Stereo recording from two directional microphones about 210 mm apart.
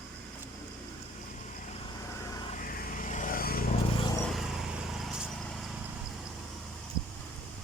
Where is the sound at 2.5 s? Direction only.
40° left (ahead or behind).